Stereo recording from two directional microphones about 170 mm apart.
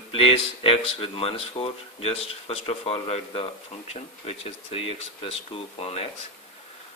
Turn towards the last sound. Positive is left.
turn(degrees=35)  # may be behind; listen again after turning